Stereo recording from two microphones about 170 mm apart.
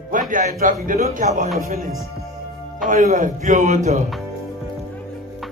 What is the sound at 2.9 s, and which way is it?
A man's voice, 50° right (ahead or behind).